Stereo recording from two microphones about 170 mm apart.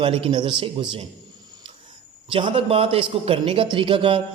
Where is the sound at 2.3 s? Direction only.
30° right (ahead or behind).